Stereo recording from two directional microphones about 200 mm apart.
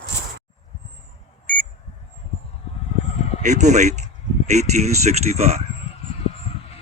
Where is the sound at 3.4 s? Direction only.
35° right (ahead or behind).